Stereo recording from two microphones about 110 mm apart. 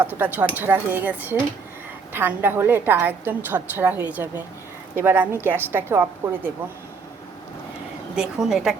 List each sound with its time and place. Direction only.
0.0 s a woman's voice: 15° right (ahead or behind)
8.1 s a woman's voice: 5° right (ahead or behind)